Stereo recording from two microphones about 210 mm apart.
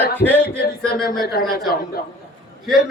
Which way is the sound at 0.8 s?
5° left (ahead or behind).